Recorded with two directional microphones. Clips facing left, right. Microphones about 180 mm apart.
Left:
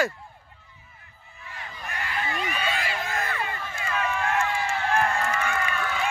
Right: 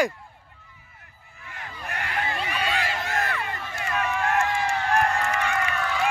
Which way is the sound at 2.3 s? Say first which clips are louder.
Even; 35° right (ahead or behind).